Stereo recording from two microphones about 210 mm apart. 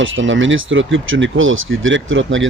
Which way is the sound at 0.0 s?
65° right (ahead or behind).